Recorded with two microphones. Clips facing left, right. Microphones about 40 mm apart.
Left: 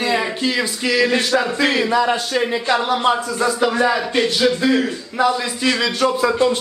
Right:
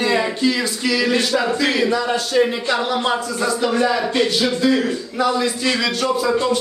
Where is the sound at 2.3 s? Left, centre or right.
Centre.